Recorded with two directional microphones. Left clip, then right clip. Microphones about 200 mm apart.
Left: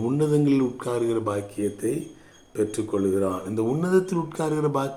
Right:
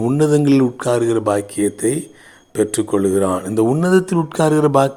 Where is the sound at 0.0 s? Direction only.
35° right (ahead or behind).